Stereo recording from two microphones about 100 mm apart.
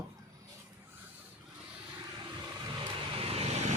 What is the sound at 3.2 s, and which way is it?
Vehicle, 75° right (ahead or behind).